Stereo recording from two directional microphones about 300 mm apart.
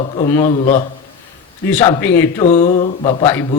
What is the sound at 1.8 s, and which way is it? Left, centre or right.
Speech, centre.